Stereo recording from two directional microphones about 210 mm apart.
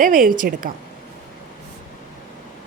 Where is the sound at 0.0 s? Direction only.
40° right (ahead or behind).